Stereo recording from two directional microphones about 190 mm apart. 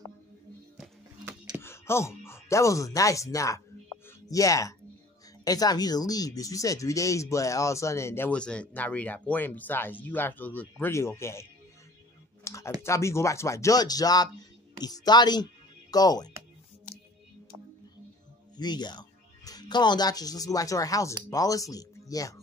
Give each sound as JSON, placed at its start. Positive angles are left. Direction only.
{"t": 0.7, "sound": "music", "side_deg": -5}
{"t": 1.6, "sound": "speech", "side_deg": 15}
{"t": 12.4, "sound": "clicking", "side_deg": 15}
{"t": 12.8, "sound": "speech", "side_deg": 15}
{"t": 18.6, "sound": "speech", "side_deg": 20}